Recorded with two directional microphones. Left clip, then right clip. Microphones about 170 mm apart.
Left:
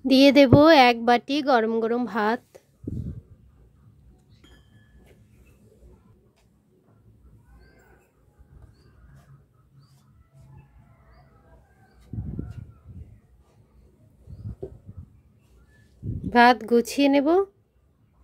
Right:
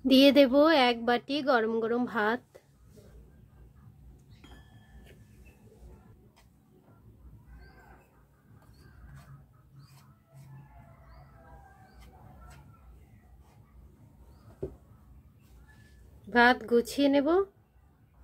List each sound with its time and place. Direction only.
0.0 s speech: 25° left (ahead or behind)
16.3 s speech: 45° left (ahead or behind)